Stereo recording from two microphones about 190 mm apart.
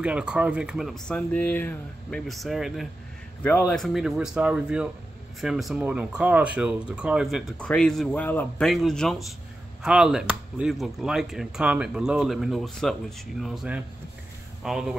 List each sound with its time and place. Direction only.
0.0 s speech: 5° right (ahead or behind)